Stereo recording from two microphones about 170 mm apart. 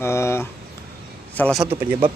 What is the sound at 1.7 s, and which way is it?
Speech, 35° right (ahead or behind).